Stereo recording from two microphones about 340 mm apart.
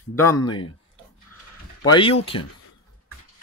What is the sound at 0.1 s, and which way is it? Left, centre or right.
Speech, centre.